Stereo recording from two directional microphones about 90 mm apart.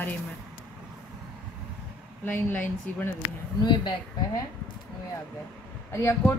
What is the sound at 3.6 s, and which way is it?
Speech, 50° left (ahead or behind).